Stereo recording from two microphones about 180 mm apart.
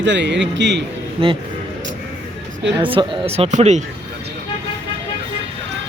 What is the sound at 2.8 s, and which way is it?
Speech, 30° right (ahead or behind).